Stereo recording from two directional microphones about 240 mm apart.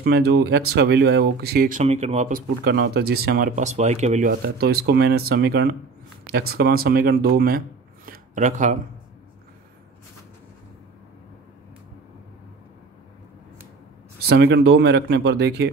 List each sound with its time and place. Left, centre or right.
0.0 s speech: right
14.2 s speech: right